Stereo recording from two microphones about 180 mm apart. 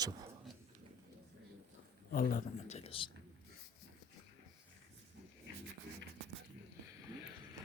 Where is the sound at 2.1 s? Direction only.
50° left (ahead or behind); by 3.1 s 30° left (ahead or behind).